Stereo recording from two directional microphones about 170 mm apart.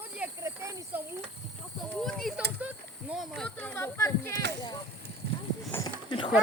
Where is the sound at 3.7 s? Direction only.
15° left (ahead or behind).